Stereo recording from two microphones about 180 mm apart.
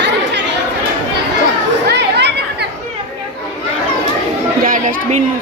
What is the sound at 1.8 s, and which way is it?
Chatter, 70° right (ahead or behind).